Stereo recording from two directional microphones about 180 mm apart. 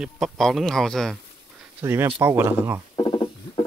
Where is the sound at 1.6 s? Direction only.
10° right (ahead or behind).